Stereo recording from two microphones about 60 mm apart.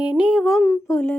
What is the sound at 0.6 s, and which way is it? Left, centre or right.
Speech, left.